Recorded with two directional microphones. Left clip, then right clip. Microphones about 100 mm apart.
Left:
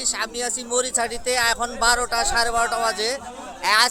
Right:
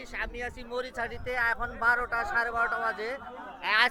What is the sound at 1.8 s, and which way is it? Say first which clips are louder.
Speech: left 5 dB; 90° left.